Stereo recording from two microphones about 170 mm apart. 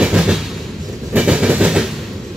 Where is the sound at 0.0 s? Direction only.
5° right (ahead or behind).